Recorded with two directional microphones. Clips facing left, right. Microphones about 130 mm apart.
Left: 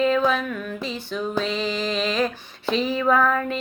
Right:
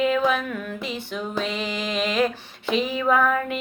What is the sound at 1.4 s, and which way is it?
Speech, 55° right (ahead or behind).